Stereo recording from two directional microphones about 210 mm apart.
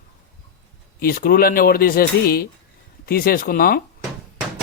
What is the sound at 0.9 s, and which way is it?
Speech, 45° left (ahead or behind).